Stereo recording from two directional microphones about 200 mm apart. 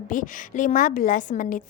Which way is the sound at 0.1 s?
40° left (ahead or behind).